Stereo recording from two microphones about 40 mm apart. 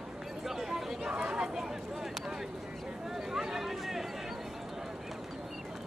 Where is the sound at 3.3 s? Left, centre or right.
Centre.